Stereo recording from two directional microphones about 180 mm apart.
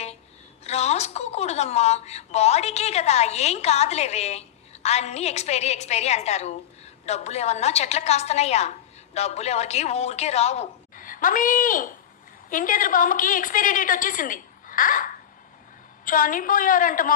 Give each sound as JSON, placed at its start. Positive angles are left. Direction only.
{"t": 0.6, "sound": "a woman's voice", "side_deg": 35}